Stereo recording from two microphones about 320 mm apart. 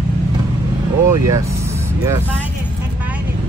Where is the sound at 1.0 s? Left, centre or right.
Centre.